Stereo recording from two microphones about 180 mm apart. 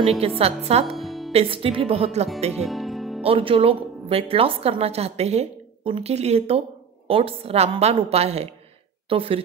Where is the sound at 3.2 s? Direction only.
30° right (ahead or behind).